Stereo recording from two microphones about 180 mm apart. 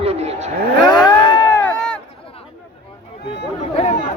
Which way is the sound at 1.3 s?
25° left (ahead or behind).